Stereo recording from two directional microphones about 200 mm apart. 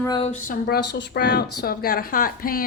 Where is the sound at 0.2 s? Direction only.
35° left (ahead or behind).